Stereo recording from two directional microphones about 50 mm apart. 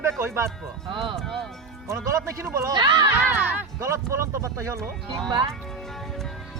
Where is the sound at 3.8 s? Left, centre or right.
Right.